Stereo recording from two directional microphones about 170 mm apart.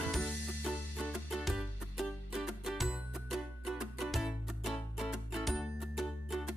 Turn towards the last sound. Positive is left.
turn(degrees=0)  # may be behind; listen again after turning